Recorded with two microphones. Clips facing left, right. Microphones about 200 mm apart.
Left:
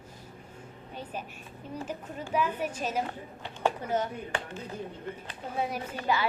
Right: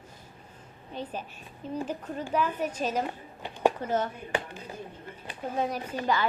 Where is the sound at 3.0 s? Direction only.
15° right (ahead or behind).